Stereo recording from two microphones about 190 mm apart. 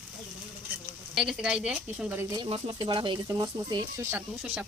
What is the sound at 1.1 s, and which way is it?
A woman's voice, centre (ahead or behind).